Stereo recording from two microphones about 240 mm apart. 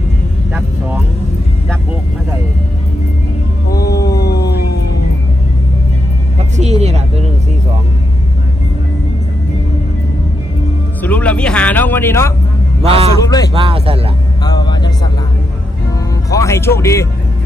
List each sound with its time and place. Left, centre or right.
3.7 s music: left
6.5 s vehicle: right
11.0 s music: centre
12.8 s a sound: right
13.2 s music: centre
13.5 s speech: right
14.4 s music: centre
16.3 s music: centre